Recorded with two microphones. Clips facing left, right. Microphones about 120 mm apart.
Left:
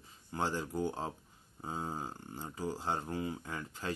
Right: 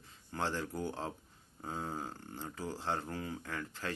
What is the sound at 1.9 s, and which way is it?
Speech, 15° left (ahead or behind).